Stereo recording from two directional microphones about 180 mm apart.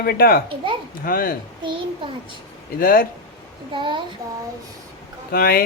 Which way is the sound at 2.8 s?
50° left (ahead or behind).